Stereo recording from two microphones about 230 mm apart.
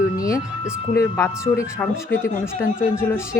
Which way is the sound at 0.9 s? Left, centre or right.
Centre.